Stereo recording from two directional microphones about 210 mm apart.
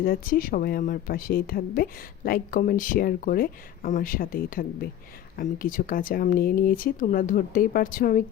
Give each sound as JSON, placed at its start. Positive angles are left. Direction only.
{"t": 0.0, "sound": "speech", "side_deg": 45}